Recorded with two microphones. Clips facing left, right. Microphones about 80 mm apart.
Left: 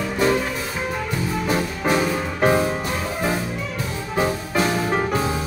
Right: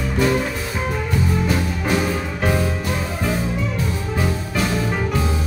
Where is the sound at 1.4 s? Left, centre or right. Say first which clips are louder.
Even; left.